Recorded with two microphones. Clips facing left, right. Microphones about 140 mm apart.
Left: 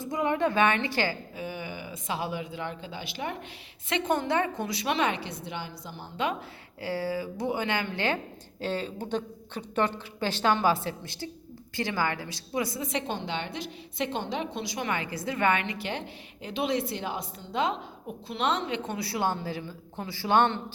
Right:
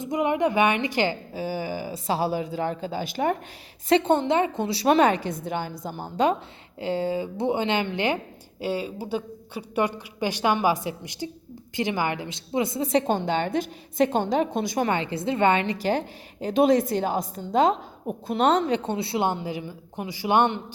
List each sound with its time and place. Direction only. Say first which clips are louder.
0.0 s a woman's voice: right 4 dB; 20° right (ahead or behind)
1.3 s a woman's voice: right 7 dB; 30° right (ahead or behind)
3.8 s a woman's voice: right 7 dB; 30° right (ahead or behind)
6.7 s a woman's voice: right 5 dB; 20° right (ahead or behind); by 14.8 s 50° right (ahead or behind)
14.8 s a woman's voice: right 6 dB; 25° right (ahead or behind)